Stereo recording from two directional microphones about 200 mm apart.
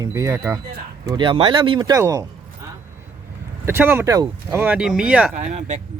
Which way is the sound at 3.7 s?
10° right (ahead or behind).